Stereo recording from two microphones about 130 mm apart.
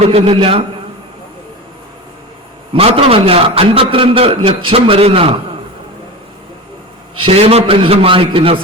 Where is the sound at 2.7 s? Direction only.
50° right (ahead or behind).